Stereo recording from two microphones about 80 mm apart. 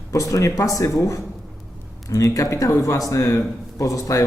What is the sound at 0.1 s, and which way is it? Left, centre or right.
A man's voice, left.